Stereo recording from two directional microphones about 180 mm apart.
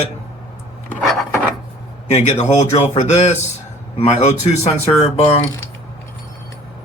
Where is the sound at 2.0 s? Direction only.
40° left (ahead or behind).